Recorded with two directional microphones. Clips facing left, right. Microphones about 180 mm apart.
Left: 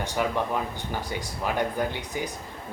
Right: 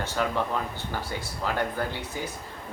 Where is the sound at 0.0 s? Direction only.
15° left (ahead or behind).